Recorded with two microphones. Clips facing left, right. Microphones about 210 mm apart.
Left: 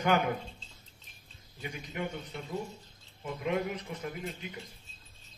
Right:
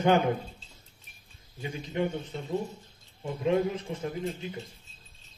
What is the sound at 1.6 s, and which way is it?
Speech, 30° right (ahead or behind).